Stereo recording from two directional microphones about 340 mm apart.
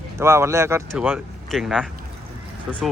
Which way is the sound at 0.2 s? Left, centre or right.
Centre.